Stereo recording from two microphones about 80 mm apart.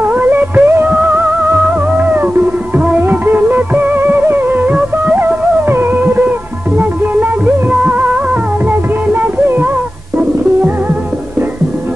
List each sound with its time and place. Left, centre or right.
0.0 s music: right